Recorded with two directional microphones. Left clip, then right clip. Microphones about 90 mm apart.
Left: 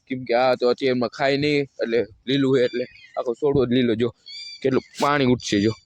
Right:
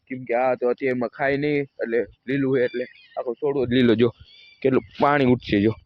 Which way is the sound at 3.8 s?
40° right (ahead or behind).